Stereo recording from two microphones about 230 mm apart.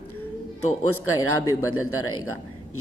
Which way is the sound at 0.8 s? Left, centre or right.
Left.